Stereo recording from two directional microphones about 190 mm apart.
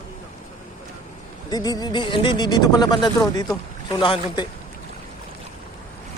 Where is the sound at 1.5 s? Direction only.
20° left (ahead or behind).